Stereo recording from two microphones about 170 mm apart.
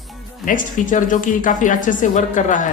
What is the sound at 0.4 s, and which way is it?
Speech, 50° left (ahead or behind).